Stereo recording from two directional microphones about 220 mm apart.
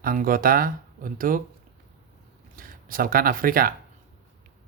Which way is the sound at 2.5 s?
40° right (ahead or behind).